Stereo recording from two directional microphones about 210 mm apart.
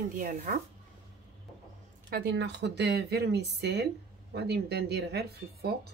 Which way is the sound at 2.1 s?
50° right (ahead or behind).